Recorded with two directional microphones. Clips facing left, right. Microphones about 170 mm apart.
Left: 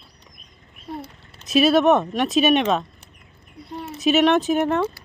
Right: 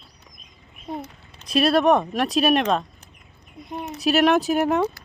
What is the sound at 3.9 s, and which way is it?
Speech, centre (ahead or behind).